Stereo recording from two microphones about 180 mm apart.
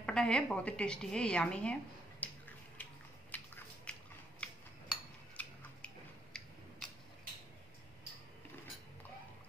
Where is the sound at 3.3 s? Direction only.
10° left (ahead or behind).